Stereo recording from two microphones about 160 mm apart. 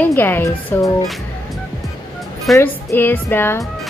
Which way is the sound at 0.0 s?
10° left (ahead or behind).